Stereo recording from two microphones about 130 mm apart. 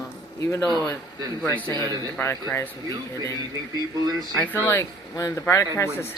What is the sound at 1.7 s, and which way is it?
Speech, 30° right (ahead or behind).